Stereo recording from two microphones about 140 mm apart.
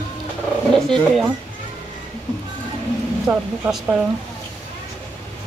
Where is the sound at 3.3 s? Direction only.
15° right (ahead or behind).